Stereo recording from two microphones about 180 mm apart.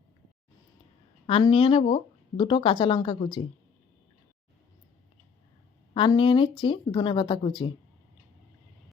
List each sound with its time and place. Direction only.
1.3 s a woman's voice: 30° left (ahead or behind)
5.9 s speech: 25° left (ahead or behind)